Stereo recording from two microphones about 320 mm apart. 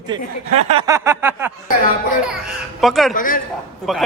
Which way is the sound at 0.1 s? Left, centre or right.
Centre.